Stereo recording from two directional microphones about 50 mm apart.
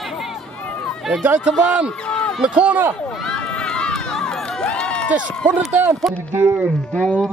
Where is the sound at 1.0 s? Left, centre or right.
Centre.